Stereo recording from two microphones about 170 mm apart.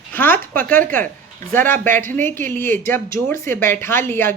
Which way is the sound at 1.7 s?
10° left (ahead or behind).